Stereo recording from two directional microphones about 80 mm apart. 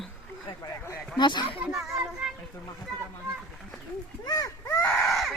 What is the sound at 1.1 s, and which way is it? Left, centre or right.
Speech, left.